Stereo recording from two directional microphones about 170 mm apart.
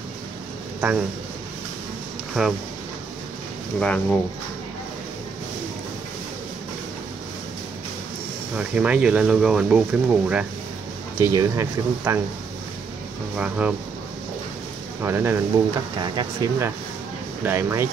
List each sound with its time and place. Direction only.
0.7 s speech: 10° right (ahead or behind)
2.4 s speech: centre (ahead or behind)
3.8 s speech: 5° left (ahead or behind)
8.5 s speech: 10° right (ahead or behind)
11.1 s speech: 15° right (ahead or behind)
13.4 s speech: 10° right (ahead or behind)
15.0 s speech: 15° right (ahead or behind)
16.0 s speech: 25° right (ahead or behind)
17.4 s speech: 15° right (ahead or behind)